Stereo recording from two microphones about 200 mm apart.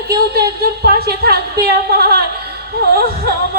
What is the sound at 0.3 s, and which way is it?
Speech, 50° right (ahead or behind).